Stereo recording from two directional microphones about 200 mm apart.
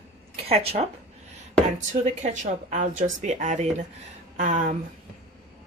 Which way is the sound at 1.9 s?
35° right (ahead or behind).